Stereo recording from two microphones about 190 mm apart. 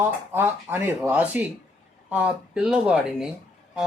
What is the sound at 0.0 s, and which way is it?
Speech, 10° right (ahead or behind).